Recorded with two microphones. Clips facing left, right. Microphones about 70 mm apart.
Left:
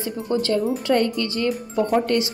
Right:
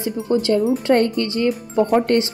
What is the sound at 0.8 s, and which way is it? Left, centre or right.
Speech, right.